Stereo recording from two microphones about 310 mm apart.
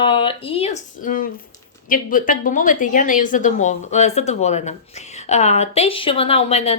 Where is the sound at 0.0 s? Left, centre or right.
Centre.